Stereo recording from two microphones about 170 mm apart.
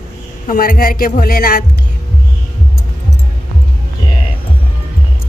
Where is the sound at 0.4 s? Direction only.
55° left (ahead or behind).